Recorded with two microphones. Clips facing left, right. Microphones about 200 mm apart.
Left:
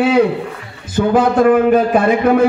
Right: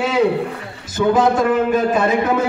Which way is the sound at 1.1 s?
55° left (ahead or behind).